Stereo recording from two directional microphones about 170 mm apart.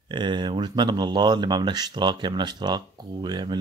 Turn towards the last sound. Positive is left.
turn(degrees=-25)  # may be behind; listen again after turning